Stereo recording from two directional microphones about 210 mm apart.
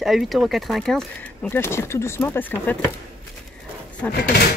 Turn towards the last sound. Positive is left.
turn(degrees=45)  # may be behind; listen again after turning